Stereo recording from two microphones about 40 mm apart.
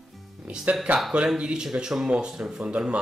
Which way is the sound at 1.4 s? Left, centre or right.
Centre.